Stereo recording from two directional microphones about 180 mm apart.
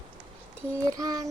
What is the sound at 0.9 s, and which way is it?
Child singing, 20° right (ahead or behind).